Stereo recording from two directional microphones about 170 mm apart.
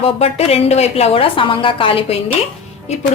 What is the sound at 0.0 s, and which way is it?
A woman's voice, 35° left (ahead or behind).